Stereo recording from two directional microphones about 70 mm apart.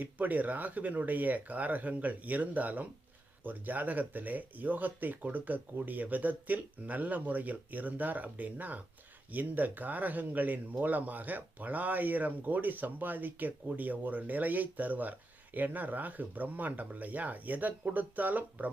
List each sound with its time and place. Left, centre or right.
0.0 s speech: right